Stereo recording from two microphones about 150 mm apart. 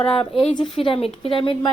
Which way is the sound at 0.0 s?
35° left (ahead or behind).